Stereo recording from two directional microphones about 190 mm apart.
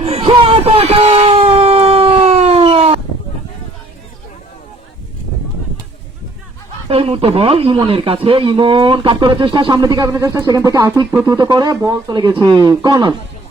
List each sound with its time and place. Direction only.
0.0 s wail: 30° right (ahead or behind)
6.8 s speech: 30° right (ahead or behind)